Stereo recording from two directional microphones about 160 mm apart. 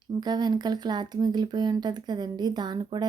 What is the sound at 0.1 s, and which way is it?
Speech, 25° right (ahead or behind).